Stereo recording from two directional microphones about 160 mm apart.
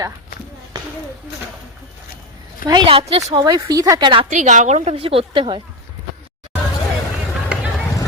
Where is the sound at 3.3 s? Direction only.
25° right (ahead or behind).